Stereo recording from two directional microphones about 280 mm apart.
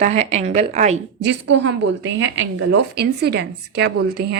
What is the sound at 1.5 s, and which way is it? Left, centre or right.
A woman's voice, right.